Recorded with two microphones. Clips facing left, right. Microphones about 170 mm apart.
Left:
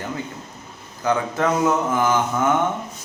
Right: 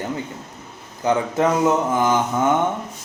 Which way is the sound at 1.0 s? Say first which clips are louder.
Right 2 dB; 20° right (ahead or behind).